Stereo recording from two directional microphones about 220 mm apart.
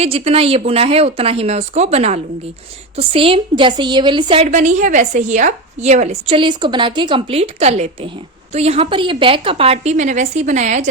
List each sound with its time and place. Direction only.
0.0 s a woman's voice: 25° right (ahead or behind)